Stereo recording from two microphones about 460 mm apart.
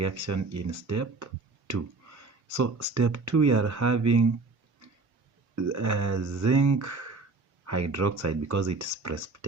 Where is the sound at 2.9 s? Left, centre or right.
Right.